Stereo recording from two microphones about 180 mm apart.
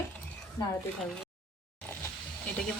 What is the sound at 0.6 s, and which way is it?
Speech, 25° left (ahead or behind).